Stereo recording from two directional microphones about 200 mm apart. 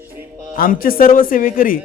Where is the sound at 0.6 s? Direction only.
45° left (ahead or behind).